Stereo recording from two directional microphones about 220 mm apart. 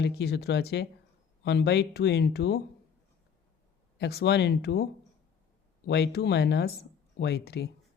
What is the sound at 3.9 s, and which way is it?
Speech, 50° left (ahead or behind).